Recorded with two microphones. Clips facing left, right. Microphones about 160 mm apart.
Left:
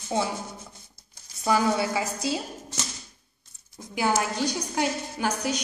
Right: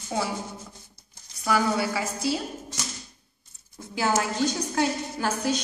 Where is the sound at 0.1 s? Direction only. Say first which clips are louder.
Left 2 dB; 25° left (ahead or behind).